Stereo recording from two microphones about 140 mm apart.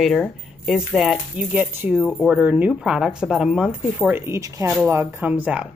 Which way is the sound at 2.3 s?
10° right (ahead or behind).